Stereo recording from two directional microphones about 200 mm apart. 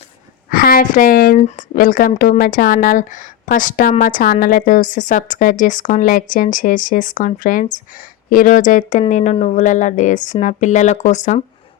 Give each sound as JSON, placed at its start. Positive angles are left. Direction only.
{"t": 0.5, "sound": "speech", "side_deg": 45}
{"t": 1.4, "sound": "speech", "side_deg": 40}